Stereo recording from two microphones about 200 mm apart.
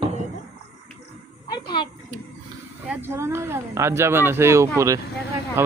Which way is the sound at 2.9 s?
10° right (ahead or behind).